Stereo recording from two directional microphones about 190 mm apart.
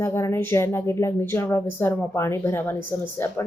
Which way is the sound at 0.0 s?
15° left (ahead or behind).